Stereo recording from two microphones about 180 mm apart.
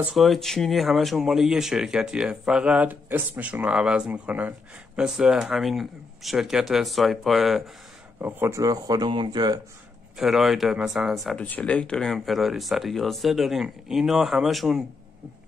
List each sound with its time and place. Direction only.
0.0 s speech: centre (ahead or behind)
8.2 s speech: 10° right (ahead or behind)
10.1 s speech: centre (ahead or behind)